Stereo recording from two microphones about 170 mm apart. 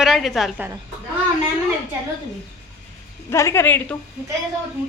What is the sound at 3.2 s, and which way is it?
Speech, 15° left (ahead or behind).